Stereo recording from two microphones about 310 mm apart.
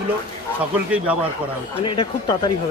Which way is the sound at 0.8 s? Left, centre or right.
Centre.